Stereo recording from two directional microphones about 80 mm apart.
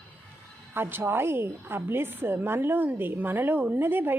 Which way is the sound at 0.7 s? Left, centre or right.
Right.